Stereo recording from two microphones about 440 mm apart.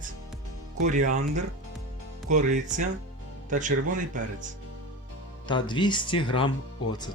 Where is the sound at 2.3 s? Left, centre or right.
Centre.